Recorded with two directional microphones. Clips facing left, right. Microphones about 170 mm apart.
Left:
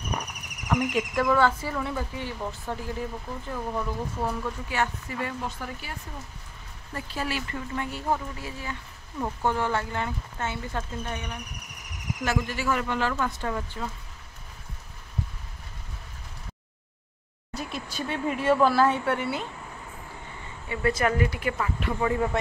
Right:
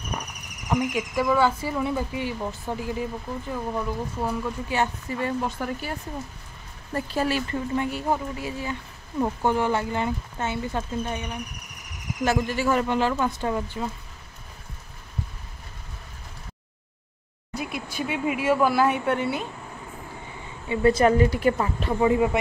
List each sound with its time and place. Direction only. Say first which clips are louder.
0.7 s speech: right 1 dB; 10° right (ahead or behind)
4.6 s speech: right 3 dB; 25° right (ahead or behind)
5.6 s a woman's voice: right 7 dB; 45° right (ahead or behind)
7.7 s speech: right 3 dB; 15° right (ahead or behind)
12.3 s speech: right 4 dB; 30° right (ahead or behind)
17.6 s speech: right 3 dB; 10° right (ahead or behind)
20.6 s a woman's voice: right 6 dB; 25° right (ahead or behind)
22.0 s speech: right 5 dB; 15° right (ahead or behind)